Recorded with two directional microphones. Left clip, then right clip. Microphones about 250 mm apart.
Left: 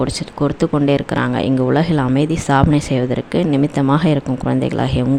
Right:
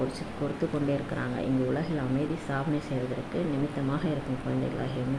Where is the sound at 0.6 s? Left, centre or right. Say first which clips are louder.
Left 13 dB; left.